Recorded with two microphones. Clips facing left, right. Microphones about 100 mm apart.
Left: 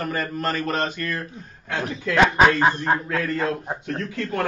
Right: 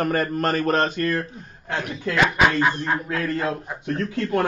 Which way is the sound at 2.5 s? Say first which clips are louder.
Left 2 dB; 30° left (ahead or behind).